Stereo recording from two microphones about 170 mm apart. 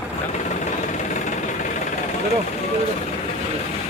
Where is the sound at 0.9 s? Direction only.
45° left (ahead or behind).